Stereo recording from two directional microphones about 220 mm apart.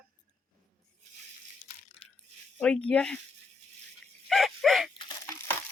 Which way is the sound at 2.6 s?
5° left (ahead or behind).